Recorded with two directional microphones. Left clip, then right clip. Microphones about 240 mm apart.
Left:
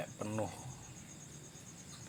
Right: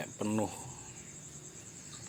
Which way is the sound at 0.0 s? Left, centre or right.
Right.